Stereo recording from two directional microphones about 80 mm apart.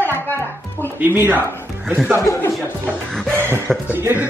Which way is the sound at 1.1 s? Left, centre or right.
Right.